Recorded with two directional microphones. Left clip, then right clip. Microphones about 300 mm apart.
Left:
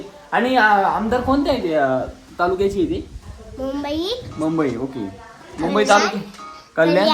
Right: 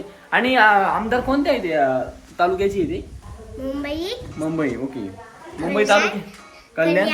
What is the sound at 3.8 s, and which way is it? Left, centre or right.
A child's voice, centre.